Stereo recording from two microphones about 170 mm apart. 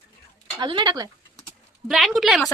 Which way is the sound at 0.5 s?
25° right (ahead or behind).